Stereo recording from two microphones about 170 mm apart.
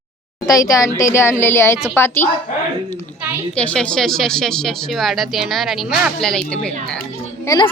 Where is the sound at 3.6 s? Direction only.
5° left (ahead or behind).